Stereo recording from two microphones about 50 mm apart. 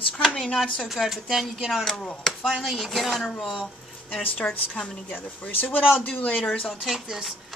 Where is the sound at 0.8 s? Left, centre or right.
Centre.